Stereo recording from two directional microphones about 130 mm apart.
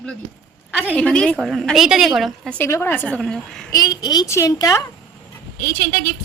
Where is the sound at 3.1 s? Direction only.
5° left (ahead or behind).